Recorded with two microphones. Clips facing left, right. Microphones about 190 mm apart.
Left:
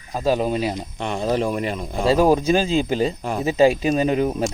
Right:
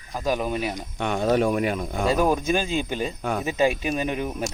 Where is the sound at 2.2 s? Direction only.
30° left (ahead or behind).